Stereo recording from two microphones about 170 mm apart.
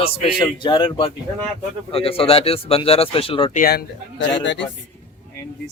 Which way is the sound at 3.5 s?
60° left (ahead or behind).